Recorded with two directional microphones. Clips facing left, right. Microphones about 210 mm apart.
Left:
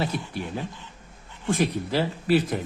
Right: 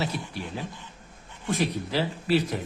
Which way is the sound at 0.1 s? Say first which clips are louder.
Left 3 dB; 55° left (ahead or behind).